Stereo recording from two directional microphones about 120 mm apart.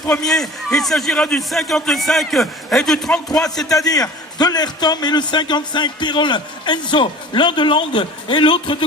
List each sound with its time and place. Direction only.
0.3 s a man's voice: 5° left (ahead or behind)
3.7 s a man's voice: 30° left (ahead or behind)